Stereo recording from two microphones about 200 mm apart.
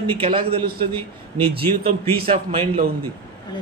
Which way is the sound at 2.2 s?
30° right (ahead or behind).